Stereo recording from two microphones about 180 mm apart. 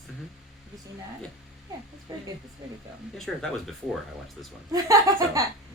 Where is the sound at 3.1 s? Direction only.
Centre (ahead or behind).